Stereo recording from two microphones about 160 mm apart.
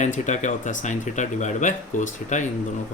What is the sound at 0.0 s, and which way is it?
Speech, 50° left (ahead or behind).